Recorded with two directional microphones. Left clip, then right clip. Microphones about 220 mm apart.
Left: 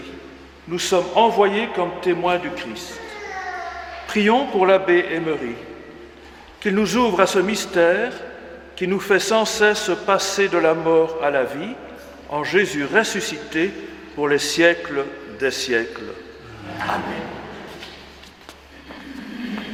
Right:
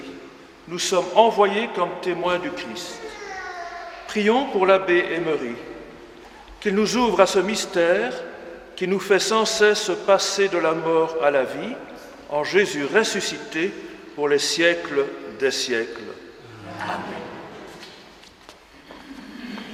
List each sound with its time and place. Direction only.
0.7 s a man's voice: 40° left (ahead or behind)
4.0 s a man's voice: 40° left (ahead or behind)
6.6 s a man's voice: 40° left (ahead or behind)